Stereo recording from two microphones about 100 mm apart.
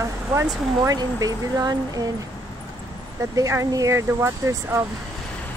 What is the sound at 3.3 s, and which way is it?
Speech, 35° right (ahead or behind).